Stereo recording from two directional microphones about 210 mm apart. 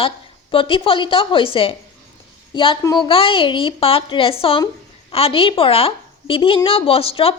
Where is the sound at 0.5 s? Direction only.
25° left (ahead or behind).